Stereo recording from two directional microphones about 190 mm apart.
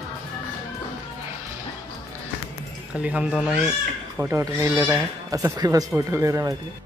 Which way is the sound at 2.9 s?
5° right (ahead or behind).